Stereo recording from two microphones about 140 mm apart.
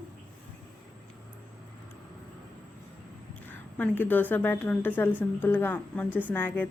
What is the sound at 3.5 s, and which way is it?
Speech, 15° left (ahead or behind).